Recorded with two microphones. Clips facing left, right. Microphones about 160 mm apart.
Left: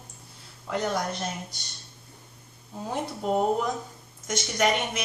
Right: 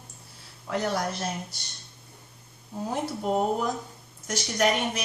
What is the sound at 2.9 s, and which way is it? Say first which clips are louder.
A woman's voice: even; centre (ahead or behind).